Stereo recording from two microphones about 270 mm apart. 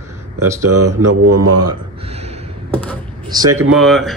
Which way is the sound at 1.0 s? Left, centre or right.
Right.